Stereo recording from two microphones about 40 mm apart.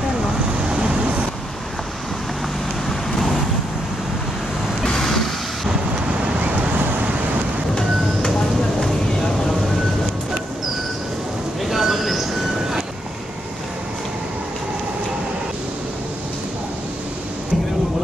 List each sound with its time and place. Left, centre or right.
0.7 s vehicle: right
2.9 s vehicle: centre
4.8 s vehicle: centre
11.6 s train: centre